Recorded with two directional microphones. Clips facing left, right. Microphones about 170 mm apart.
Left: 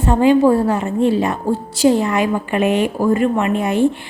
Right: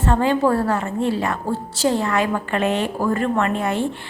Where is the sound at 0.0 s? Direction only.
15° left (ahead or behind).